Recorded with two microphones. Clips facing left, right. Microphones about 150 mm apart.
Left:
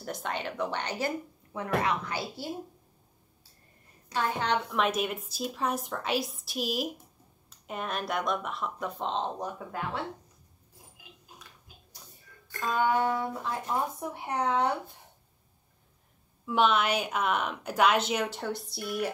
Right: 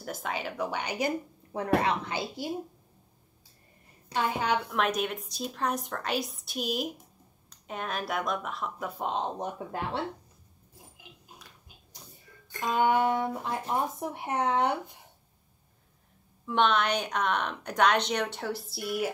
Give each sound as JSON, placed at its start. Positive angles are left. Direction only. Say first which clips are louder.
{"t": 0.0, "sound": "a woman's voice", "louder": "even", "side_deg": 0}
{"t": 1.5, "sound": "speech", "louder": "right 3 dB", "side_deg": -35}
{"t": 4.1, "sound": "a woman's voice", "louder": "right 1 dB", "side_deg": -10}
{"t": 12.4, "sound": "speech", "louder": "right 2 dB", "side_deg": -20}
{"t": 16.4, "sound": "a woman's voice", "louder": "even", "side_deg": 5}